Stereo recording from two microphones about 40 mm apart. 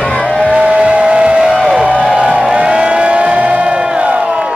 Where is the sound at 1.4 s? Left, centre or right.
Centre.